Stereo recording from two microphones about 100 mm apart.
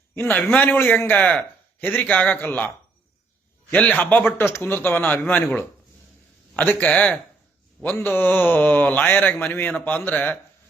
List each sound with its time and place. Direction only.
0.1 s a man's voice: 15° left (ahead or behind)
3.7 s speech: 15° left (ahead or behind)